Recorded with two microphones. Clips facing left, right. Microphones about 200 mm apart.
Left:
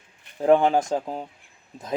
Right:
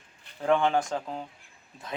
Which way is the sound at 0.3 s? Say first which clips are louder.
Left 6 dB; 35° left (ahead or behind).